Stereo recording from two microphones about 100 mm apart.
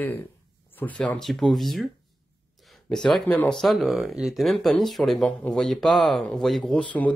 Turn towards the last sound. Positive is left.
turn(degrees=15)  # may be behind; listen again after turning